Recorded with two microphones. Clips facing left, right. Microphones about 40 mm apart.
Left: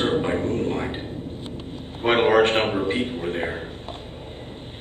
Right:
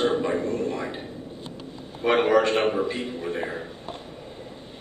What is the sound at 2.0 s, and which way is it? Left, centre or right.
A man's voice, left.